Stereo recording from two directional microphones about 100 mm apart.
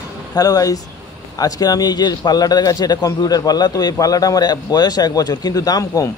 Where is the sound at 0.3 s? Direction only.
40° left (ahead or behind).